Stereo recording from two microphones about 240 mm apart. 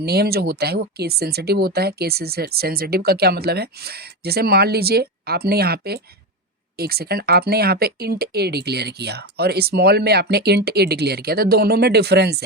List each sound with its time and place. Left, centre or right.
0.0 s speech: right